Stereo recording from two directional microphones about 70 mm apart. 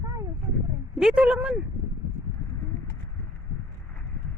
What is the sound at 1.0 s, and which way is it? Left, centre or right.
Speech, centre.